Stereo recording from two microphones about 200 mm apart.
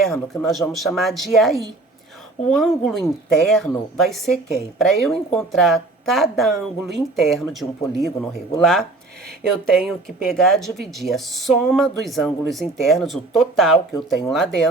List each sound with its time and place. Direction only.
0.0 s speech: centre (ahead or behind)